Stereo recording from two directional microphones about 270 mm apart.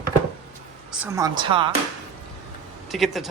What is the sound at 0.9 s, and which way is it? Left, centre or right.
Speech, centre.